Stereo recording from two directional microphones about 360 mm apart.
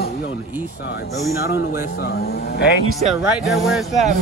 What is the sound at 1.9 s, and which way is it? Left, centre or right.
Speech, left.